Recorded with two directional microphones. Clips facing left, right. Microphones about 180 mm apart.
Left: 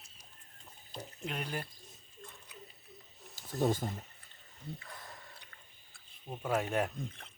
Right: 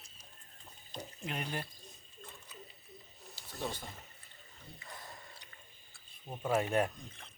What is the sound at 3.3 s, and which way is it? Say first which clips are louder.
Speech: left 9 dB; 50° left (ahead or behind).